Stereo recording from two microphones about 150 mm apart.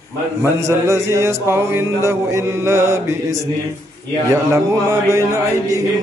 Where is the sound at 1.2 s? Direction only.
15° right (ahead or behind).